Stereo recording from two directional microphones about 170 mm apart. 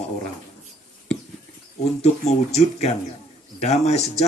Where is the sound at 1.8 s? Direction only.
40° left (ahead or behind).